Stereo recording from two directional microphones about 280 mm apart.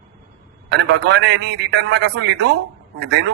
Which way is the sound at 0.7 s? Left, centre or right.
Right.